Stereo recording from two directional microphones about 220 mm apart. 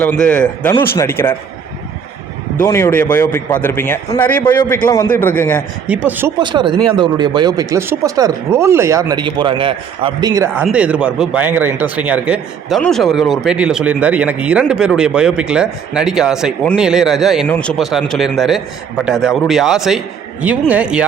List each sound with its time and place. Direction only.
0.0 s a man's voice: 5° left (ahead or behind)
2.6 s a man's voice: 10° left (ahead or behind)
5.9 s speech: 5° right (ahead or behind)
6.4 s speech: 20° right (ahead or behind)
10.6 s speech: 5° right (ahead or behind)